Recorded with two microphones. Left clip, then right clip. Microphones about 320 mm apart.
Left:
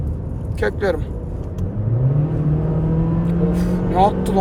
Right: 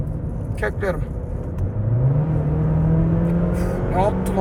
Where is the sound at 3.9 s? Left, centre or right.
Left.